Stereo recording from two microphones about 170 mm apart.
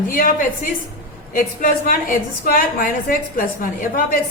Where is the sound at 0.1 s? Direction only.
55° left (ahead or behind).